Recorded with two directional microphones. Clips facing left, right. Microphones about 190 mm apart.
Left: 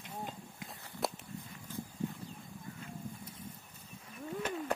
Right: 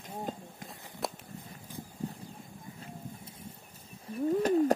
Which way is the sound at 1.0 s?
Centre (ahead or behind).